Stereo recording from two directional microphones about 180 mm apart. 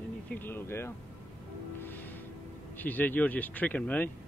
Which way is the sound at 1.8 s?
10° left (ahead or behind).